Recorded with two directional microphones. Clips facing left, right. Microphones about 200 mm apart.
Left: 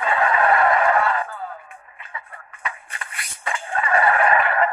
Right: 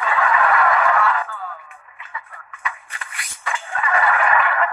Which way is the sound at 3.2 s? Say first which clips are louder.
Even; 30° left (ahead or behind).